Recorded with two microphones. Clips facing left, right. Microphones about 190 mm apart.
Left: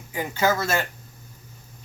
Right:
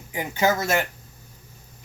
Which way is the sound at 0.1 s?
20° right (ahead or behind).